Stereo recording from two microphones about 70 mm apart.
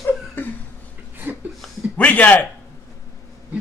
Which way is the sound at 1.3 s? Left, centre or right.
Right.